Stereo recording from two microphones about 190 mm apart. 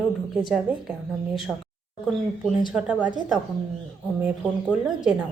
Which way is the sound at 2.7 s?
5° right (ahead or behind).